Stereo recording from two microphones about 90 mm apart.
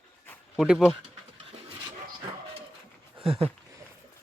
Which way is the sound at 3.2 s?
90° right.